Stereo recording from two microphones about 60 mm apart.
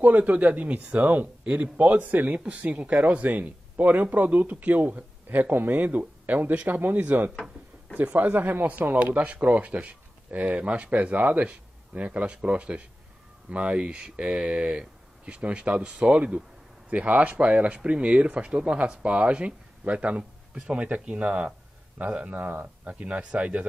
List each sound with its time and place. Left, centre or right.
0.0 s speech: right